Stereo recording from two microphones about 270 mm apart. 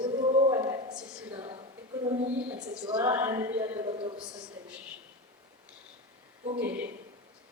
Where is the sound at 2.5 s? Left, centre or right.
Centre.